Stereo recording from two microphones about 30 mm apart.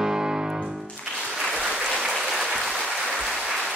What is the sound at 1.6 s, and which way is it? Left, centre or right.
Applause, right.